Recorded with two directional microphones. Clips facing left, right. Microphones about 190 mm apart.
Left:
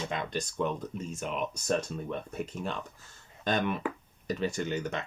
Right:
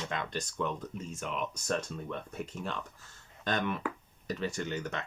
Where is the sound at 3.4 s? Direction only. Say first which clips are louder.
Left 3 dB; 20° left (ahead or behind).